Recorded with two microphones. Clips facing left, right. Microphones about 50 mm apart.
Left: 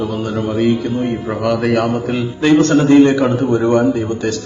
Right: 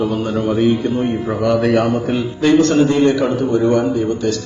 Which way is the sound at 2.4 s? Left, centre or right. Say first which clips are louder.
Left 1 dB; left.